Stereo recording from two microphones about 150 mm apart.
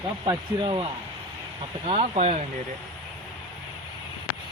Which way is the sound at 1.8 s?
40° right (ahead or behind).